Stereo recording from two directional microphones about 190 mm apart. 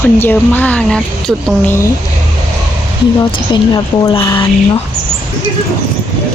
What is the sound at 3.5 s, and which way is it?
Speech, 20° left (ahead or behind).